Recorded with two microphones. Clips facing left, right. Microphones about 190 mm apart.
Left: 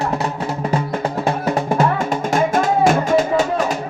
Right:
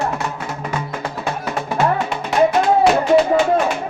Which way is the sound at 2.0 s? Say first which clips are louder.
Right 1 dB; 45° left (ahead or behind).